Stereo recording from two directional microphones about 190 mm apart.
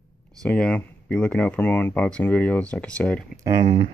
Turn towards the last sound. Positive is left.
turn(degrees=-30)  # may be behind; listen again after turning